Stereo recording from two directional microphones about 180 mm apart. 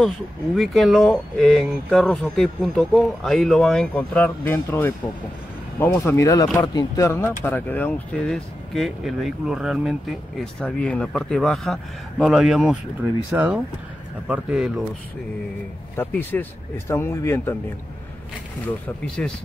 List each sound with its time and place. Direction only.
0.6 s speech: centre (ahead or behind)
16.0 s speech: 10° left (ahead or behind)
19.0 s speech: 5° left (ahead or behind)